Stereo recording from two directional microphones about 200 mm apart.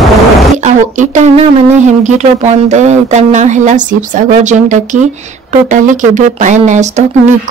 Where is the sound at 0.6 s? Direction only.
35° right (ahead or behind).